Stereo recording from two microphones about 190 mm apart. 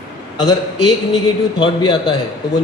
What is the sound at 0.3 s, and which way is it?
A man's voice, 20° left (ahead or behind).